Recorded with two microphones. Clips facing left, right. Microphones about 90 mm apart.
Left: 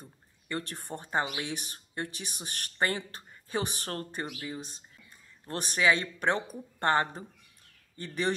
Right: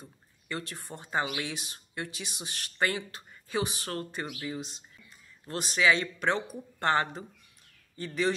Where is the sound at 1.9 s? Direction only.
50° left (ahead or behind).